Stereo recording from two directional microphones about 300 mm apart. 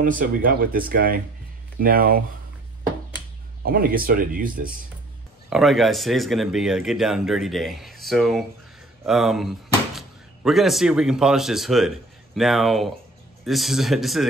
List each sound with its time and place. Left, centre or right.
0.0 s speech: right
3.6 s speech: right
5.5 s speech: centre